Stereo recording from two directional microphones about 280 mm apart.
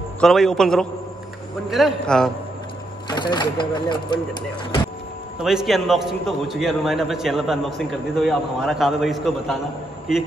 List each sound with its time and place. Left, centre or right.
0.2 s a man's voice: centre
3.1 s speech: centre
5.4 s a man's voice: centre